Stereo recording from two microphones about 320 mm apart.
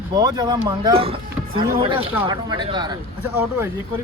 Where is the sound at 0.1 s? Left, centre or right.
Centre.